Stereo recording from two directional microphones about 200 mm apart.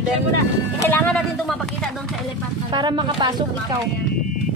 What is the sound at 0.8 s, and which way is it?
Speech, 10° left (ahead or behind).